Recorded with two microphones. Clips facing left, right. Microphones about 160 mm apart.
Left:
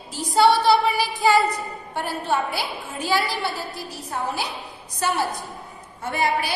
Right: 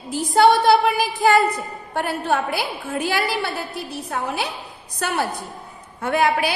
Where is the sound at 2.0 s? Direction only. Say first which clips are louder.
Right 3 dB; 60° right (ahead or behind).